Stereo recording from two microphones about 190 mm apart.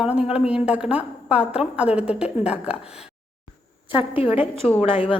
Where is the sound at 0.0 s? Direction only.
5° right (ahead or behind).